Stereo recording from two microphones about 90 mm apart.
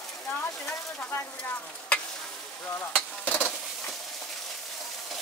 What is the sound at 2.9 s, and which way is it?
Stir, 20° left (ahead or behind).